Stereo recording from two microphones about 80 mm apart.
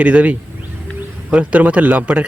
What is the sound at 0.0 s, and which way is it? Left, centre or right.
A man's voice, centre.